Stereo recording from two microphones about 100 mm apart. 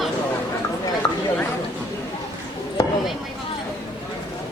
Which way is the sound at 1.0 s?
55° left (ahead or behind).